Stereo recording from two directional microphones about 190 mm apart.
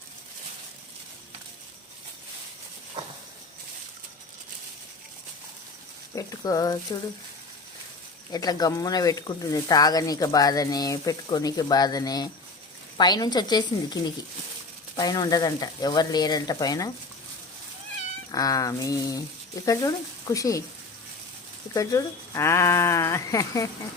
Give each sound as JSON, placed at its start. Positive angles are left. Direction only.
{"t": 3.0, "sound": "a sound", "side_deg": -25}
{"t": 6.1, "sound": "speech", "side_deg": 20}
{"t": 8.3, "sound": "speech", "side_deg": 20}
{"t": 18.3, "sound": "speech", "side_deg": 20}
{"t": 21.7, "sound": "speech", "side_deg": 20}